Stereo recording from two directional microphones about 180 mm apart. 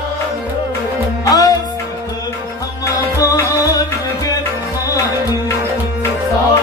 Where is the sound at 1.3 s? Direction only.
20° left (ahead or behind).